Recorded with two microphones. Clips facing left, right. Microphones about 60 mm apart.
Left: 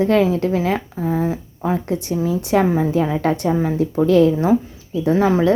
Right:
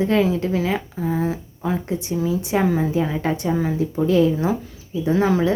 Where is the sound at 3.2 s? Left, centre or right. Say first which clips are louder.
Left 3 dB; left.